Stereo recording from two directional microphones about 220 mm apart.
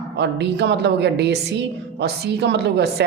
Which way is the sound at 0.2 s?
50° right (ahead or behind).